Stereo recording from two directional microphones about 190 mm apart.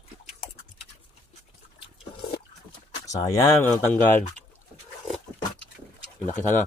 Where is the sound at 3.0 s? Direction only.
15° left (ahead or behind).